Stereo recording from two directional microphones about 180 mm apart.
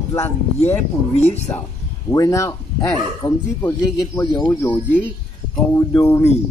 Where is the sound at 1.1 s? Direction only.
35° left (ahead or behind).